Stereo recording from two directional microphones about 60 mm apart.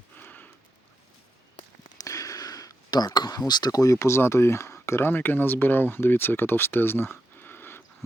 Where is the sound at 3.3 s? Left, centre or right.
Left.